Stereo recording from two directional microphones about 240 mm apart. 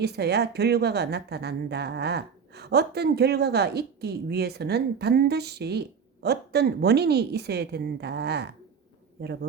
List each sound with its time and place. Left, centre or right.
0.0 s a woman's voice: right